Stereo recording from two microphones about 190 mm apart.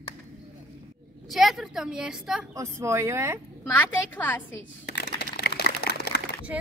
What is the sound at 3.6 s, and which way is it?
Speech, 10° left (ahead or behind).